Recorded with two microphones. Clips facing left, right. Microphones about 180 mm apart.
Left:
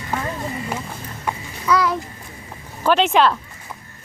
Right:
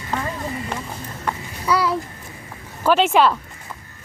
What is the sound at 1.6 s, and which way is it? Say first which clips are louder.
Speech: left 1 dB; 30° right (ahead or behind).